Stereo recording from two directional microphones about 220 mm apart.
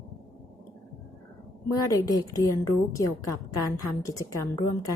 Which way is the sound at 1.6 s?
15° left (ahead or behind).